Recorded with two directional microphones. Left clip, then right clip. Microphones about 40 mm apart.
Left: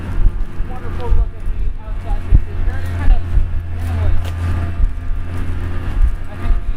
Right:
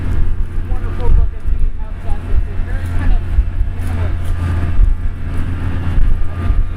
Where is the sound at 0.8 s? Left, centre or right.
Centre.